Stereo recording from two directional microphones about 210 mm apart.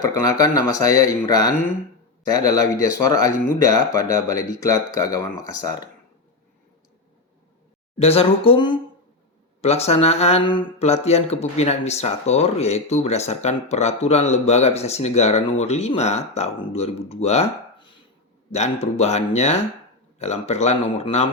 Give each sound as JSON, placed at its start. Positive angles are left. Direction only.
{"t": 0.0, "sound": "speech", "side_deg": 15}
{"t": 7.9, "sound": "speech", "side_deg": 30}